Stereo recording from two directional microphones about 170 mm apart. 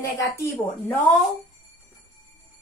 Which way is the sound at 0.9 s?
5° left (ahead or behind).